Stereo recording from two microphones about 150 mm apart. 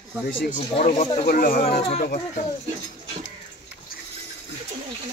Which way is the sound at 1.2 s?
75° left (ahead or behind).